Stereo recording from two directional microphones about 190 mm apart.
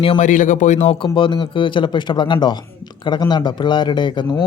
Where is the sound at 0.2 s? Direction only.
40° left (ahead or behind).